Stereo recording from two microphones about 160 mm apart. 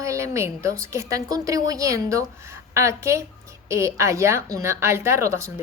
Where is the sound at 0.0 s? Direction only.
20° right (ahead or behind).